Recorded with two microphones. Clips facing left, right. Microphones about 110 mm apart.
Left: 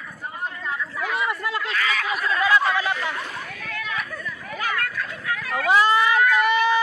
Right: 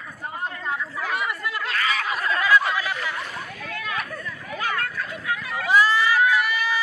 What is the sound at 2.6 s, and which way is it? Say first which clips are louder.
Chatter: left 3 dB; 30° left (ahead or behind).